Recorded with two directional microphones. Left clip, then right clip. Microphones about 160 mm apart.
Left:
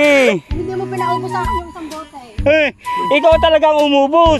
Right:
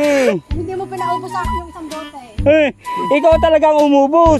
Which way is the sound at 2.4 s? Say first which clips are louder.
Right 1 dB; 25° right (ahead or behind).